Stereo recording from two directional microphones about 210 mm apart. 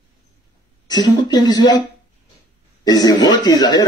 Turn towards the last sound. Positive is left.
turn(degrees=20)  # may be behind; listen again after turning